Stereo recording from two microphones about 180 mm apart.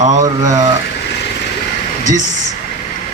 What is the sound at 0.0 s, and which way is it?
Speech, 45° right (ahead or behind).